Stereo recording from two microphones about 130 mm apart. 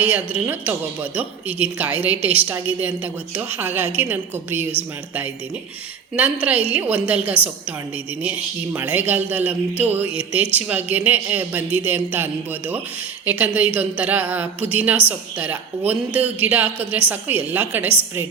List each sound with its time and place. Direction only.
0.0 s speech: 15° right (ahead or behind)